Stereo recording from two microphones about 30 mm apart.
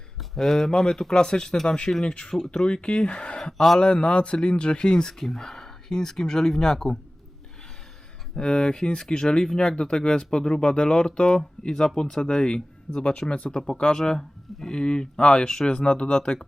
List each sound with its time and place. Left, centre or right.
0.3 s speech: centre
5.2 s speech: centre
8.4 s speech: left
9.6 s speech: left
15.7 s speech: left